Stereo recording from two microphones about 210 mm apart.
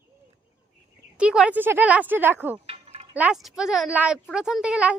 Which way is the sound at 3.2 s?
5° right (ahead or behind).